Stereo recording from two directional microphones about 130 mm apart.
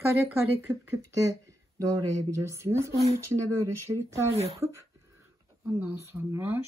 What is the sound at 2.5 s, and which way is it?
Speech, 20° right (ahead or behind).